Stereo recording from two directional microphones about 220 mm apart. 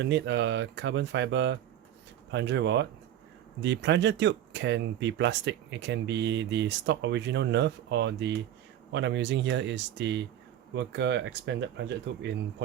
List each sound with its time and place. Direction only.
0.0 s speech: 55° right (ahead or behind)